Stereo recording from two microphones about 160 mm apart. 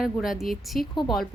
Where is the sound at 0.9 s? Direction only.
30° left (ahead or behind).